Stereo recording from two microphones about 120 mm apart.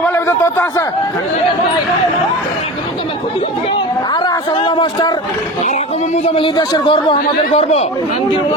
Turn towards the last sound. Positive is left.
turn(degrees=60)  # may be behind; listen again after turning